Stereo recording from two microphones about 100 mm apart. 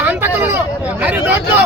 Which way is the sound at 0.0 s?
20° right (ahead or behind).